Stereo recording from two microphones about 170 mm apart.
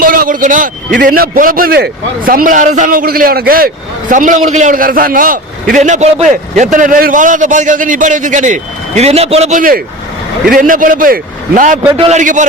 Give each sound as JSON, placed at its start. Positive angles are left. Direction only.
{"t": 0.0, "sound": "vehicle", "side_deg": -55}
{"t": 1.0, "sound": "a man's voice", "side_deg": -55}
{"t": 4.1, "sound": "a man's voice", "side_deg": -50}
{"t": 11.9, "sound": "a man's voice", "side_deg": -40}